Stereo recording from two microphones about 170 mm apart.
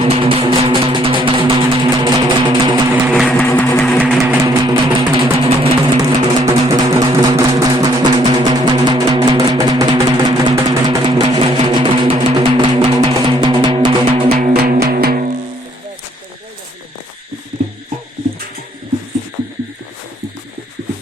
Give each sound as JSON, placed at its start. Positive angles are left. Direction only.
{"t": 0.0, "sound": "music", "side_deg": -35}
{"t": 3.3, "sound": "vehicle", "side_deg": 10}
{"t": 4.2, "sound": "music", "side_deg": -20}
{"t": 5.1, "sound": "vehicle", "side_deg": -30}
{"t": 6.5, "sound": "music", "side_deg": -20}
{"t": 14.5, "sound": "music", "side_deg": -65}